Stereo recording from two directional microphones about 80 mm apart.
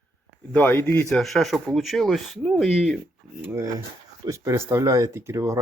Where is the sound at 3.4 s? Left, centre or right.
Right.